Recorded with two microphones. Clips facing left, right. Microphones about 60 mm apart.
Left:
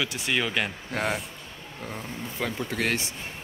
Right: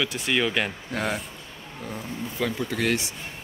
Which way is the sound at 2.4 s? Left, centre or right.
Left.